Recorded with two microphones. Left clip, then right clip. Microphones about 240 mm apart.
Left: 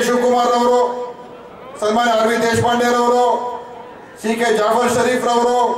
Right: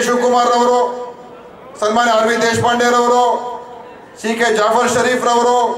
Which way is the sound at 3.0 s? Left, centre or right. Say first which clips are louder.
Right 2 dB; centre.